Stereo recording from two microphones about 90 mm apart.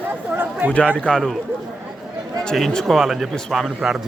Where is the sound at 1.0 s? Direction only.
5° left (ahead or behind).